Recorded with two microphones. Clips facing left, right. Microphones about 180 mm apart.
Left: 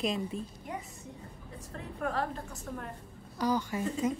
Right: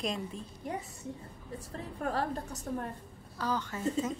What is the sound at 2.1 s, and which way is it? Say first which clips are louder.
Speech: right 1 dB; 35° right (ahead or behind).